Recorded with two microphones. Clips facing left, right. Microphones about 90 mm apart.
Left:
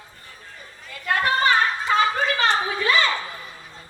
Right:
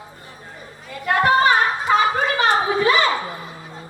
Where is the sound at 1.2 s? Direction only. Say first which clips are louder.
Right 4 dB; 20° right (ahead or behind).